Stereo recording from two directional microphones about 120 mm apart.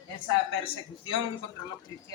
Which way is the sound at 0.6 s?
45° left (ahead or behind).